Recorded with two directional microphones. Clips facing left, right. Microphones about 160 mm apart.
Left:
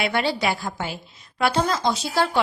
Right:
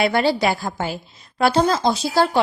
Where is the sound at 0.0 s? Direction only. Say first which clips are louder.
Right 5 dB; 40° right (ahead or behind).